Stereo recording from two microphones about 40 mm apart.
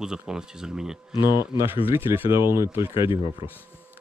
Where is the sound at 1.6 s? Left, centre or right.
Right.